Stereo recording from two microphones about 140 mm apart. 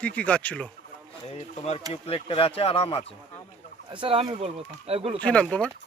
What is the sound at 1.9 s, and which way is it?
Speech, 45° left (ahead or behind).